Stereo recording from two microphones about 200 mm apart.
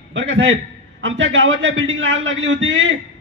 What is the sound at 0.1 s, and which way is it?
A man's voice, 65° right (ahead or behind).